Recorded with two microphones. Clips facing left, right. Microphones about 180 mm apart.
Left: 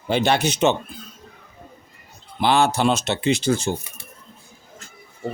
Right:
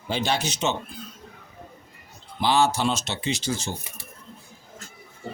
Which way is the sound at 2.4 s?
60° left (ahead or behind).